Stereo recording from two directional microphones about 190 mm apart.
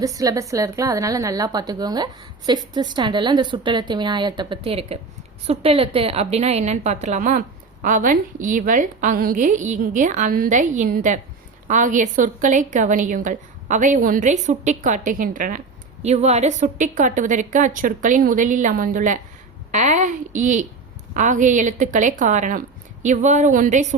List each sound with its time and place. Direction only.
0.0 s a woman's voice: 20° right (ahead or behind); by 23.8 s 40° right (ahead or behind)